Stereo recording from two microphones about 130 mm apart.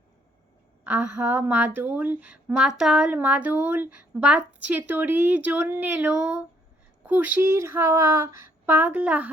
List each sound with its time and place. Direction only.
0.9 s a woman's voice: 15° right (ahead or behind)